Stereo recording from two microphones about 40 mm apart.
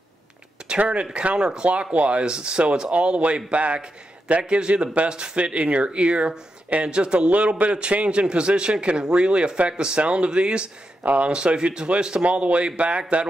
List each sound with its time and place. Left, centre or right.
0.7 s a man's voice: right
11.0 s speech: right
11.2 s a man's voice: right